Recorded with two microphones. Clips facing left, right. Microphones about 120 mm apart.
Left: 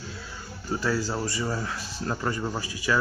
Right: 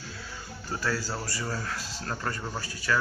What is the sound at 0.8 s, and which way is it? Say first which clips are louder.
A man's voice: left 4 dB; 20° left (ahead or behind).